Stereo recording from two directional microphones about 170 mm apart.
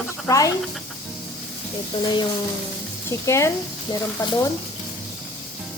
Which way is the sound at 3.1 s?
15° left (ahead or behind).